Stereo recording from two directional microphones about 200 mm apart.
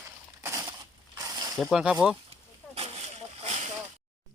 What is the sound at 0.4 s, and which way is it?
Crushing, 15° right (ahead or behind).